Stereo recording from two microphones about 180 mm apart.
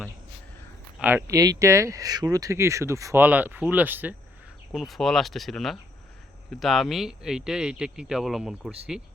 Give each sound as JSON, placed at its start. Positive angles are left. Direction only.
{"t": 0.9, "sound": "speech", "side_deg": -10}